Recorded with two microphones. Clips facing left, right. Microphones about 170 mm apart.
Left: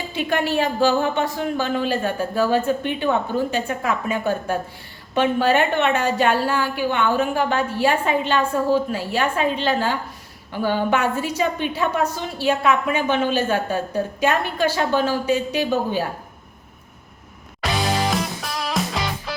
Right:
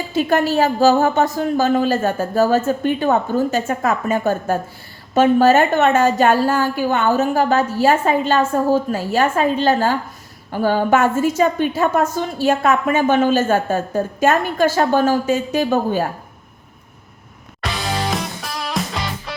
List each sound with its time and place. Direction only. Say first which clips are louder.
0.1 s a woman's voice: right 5 dB; 40° right (ahead or behind)
17.6 s music: left 1 dB; centre (ahead or behind)